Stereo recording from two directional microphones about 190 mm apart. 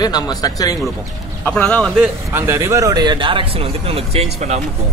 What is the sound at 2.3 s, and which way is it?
Speech, 15° right (ahead or behind).